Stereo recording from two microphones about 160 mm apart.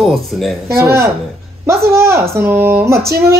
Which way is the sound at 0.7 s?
15° right (ahead or behind).